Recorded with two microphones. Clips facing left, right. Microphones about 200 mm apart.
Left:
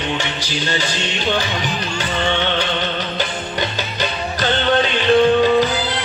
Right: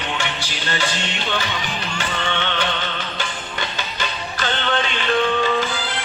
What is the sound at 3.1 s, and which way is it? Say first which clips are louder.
Music: left 6 dB; 40° left (ahead or behind).